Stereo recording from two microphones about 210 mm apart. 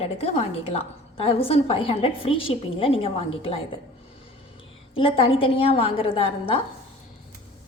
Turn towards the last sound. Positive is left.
turn(degrees=25)  # may be behind; listen again after turning